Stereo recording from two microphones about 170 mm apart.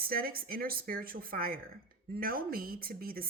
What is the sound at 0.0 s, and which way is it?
Speech, 60° right (ahead or behind).